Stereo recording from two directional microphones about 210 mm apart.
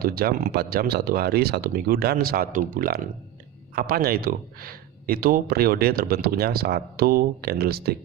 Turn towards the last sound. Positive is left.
turn(degrees=-50)  # may be behind; listen again after turning